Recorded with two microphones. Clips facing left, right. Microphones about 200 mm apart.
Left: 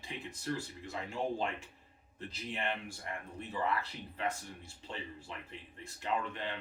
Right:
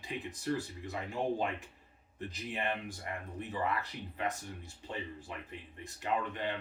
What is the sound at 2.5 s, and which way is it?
Speech, 15° right (ahead or behind).